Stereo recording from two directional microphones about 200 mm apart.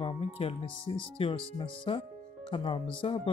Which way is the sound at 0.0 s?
25° left (ahead or behind).